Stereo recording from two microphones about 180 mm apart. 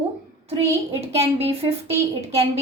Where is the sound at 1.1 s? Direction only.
35° right (ahead or behind).